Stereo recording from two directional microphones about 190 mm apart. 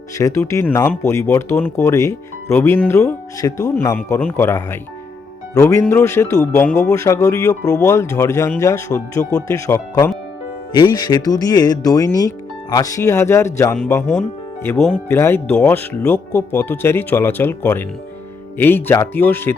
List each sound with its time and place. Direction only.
0.2 s speech: 15° left (ahead or behind)